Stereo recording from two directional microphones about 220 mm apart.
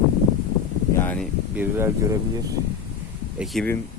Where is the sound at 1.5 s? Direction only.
10° right (ahead or behind).